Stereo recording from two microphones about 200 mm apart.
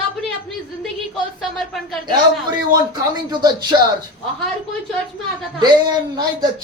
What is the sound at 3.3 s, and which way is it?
Speech, 20° right (ahead or behind).